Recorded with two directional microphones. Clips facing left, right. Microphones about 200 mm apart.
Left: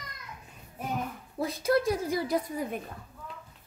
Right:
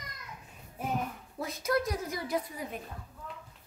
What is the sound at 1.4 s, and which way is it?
Speech, 30° left (ahead or behind).